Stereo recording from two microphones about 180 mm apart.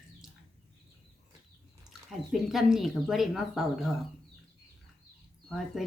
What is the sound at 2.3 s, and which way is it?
Speech, centre (ahead or behind).